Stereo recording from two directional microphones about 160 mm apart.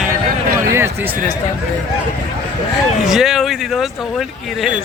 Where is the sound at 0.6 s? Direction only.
15° right (ahead or behind).